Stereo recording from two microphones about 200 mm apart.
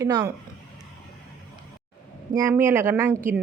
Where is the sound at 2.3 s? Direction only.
15° right (ahead or behind).